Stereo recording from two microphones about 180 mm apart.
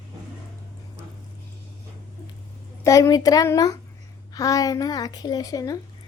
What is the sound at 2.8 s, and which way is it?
A woman's voice, 20° left (ahead or behind).